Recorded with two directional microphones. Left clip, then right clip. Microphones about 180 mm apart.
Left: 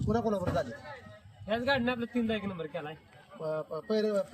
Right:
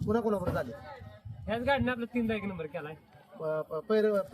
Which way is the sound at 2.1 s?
50° right (ahead or behind).